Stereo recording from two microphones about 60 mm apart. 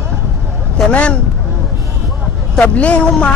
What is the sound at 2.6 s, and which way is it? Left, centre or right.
Speech, left.